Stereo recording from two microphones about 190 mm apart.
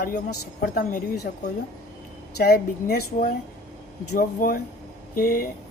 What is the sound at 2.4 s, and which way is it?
A woman's voice, 55° left (ahead or behind).